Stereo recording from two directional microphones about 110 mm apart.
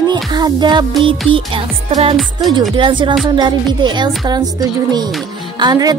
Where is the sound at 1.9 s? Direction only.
65° right (ahead or behind).